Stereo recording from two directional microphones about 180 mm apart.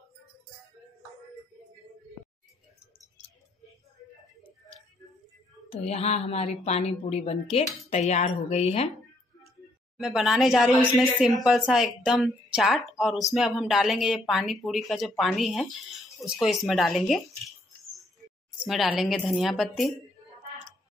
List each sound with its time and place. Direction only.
5.7 s a woman's voice: 35° left (ahead or behind)
9.9 s a woman's voice: centre (ahead or behind)
18.6 s a woman's voice: 5° right (ahead or behind)